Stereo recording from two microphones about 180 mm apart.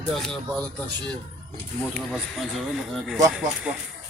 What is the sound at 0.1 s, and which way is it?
Speech, centre (ahead or behind).